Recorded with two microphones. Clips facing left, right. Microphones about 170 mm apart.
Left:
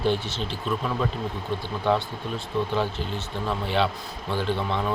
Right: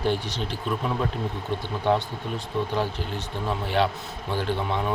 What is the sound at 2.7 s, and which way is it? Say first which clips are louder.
Speech: left 1 dB; 15° right (ahead or behind).